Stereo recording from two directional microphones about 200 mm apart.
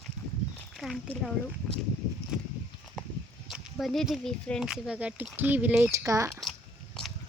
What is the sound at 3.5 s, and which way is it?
Speech, centre (ahead or behind).